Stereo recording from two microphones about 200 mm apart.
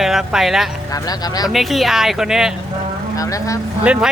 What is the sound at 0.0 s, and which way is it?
Speech, centre (ahead or behind).